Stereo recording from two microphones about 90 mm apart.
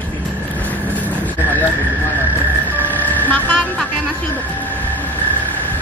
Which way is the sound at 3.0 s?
20° left (ahead or behind).